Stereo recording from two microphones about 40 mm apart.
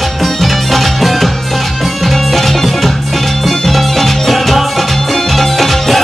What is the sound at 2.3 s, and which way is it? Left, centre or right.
Music, centre.